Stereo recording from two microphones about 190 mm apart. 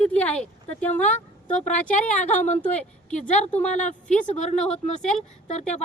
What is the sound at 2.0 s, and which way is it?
Speech, 5° left (ahead or behind).